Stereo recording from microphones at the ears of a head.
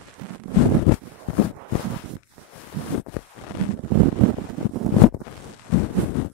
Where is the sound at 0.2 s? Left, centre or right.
Right.